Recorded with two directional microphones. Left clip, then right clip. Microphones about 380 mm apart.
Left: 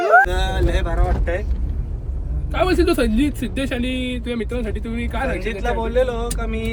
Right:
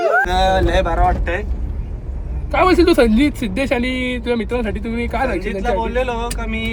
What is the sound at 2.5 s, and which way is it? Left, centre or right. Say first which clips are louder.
Speech: right 5 dB; centre.